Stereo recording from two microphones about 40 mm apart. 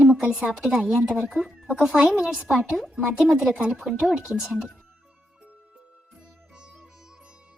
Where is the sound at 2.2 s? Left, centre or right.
Centre.